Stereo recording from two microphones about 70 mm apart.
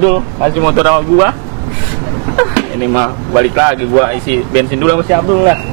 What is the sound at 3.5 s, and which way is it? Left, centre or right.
Speech, right.